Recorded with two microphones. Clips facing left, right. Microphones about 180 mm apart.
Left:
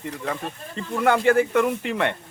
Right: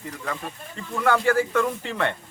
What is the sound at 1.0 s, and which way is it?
Speech, 20° left (ahead or behind).